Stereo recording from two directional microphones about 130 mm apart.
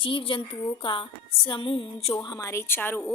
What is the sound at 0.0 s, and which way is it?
A woman's voice, 40° left (ahead or behind).